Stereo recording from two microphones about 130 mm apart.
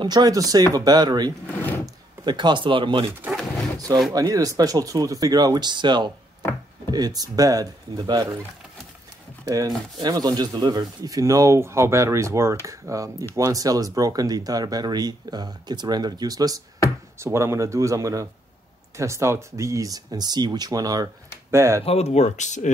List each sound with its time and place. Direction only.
0.0 s speech: 30° right (ahead or behind)
1.5 s drawer open or close: 15° left (ahead or behind)
2.2 s speech: 35° right (ahead or behind)
4.1 s speech: 25° right (ahead or behind)
9.4 s speech: 25° right (ahead or behind)
21.8 s speech: 55° left (ahead or behind)